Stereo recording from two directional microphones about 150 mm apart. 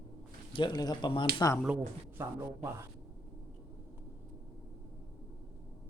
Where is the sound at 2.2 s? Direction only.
15° right (ahead or behind).